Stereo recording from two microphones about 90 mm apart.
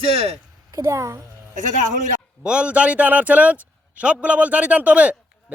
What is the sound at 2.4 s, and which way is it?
A man's voice, 10° right (ahead or behind).